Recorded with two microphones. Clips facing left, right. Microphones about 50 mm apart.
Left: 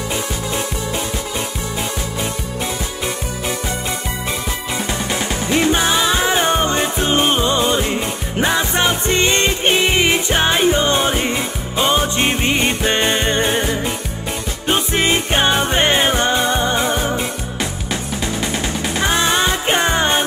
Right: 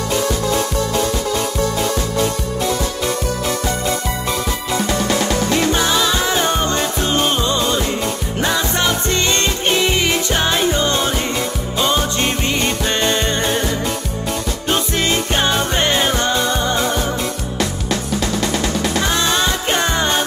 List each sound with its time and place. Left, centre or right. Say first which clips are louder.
0.1 s music: right 7 dB; centre
4.7 s music: right 5 dB; centre
18.4 s music: right 2 dB; left